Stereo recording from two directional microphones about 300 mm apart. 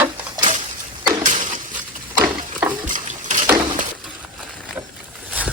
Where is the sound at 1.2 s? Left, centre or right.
Right.